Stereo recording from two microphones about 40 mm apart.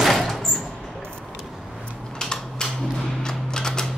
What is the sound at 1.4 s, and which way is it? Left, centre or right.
Vehicle, centre.